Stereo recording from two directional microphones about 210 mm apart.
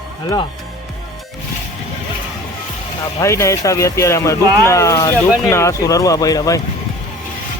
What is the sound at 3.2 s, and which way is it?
Speech, 15° left (ahead or behind).